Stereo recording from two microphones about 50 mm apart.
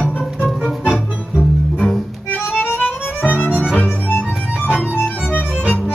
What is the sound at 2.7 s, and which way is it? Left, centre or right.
Music, left.